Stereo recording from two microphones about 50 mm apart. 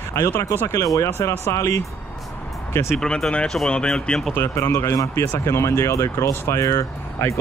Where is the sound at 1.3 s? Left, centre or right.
Left.